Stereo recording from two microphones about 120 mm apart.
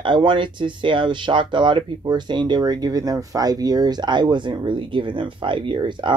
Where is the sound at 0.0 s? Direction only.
40° right (ahead or behind).